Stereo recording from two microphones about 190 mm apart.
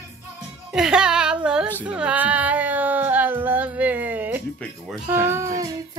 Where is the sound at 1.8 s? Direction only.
5° right (ahead or behind).